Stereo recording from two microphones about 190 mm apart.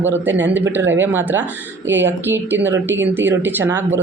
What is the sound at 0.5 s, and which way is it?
Speech, 10° right (ahead or behind).